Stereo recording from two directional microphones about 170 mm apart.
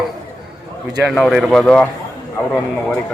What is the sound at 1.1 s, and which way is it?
Speech, centre (ahead or behind).